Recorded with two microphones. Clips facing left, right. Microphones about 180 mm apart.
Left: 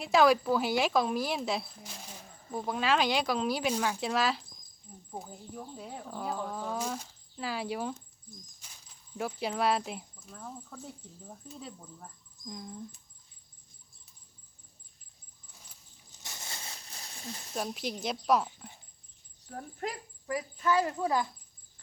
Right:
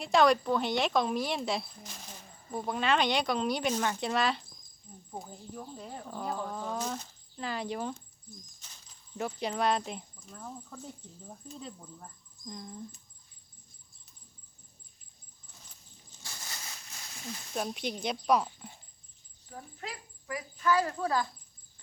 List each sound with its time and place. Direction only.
0.0 s speech: 5° left (ahead or behind)
16.2 s a sound: 20° left (ahead or behind)
17.5 s speech: centre (ahead or behind)
19.5 s speech: 50° left (ahead or behind)
20.2 s a woman's voice: 30° left (ahead or behind)